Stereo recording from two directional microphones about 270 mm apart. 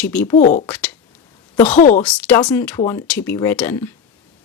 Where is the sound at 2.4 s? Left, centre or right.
Centre.